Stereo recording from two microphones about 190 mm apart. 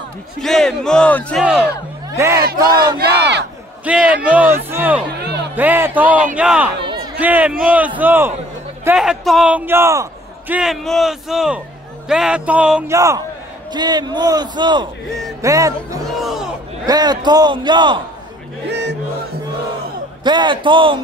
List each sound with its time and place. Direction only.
0.4 s a man's voice: centre (ahead or behind)
1.4 s a man's voice: 5° right (ahead or behind)
2.1 s a man's voice: 15° right (ahead or behind)
3.0 s battle cry: 60° right (ahead or behind)
3.8 s a man's voice: 5° right (ahead or behind)
10.5 s a man's voice: centre (ahead or behind)
12.9 s a man's voice: 15° right (ahead or behind)
16.2 s a man's voice: centre (ahead or behind)
16.8 s a man's voice: 20° right (ahead or behind)
18.7 s music: 65° right (ahead or behind)
20.2 s a man's voice: 25° right (ahead or behind)